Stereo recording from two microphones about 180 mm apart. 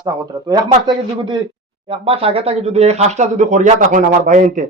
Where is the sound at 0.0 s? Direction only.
20° right (ahead or behind).